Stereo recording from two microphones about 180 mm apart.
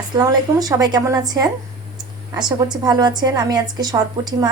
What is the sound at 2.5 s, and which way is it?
A woman's voice, 25° right (ahead or behind).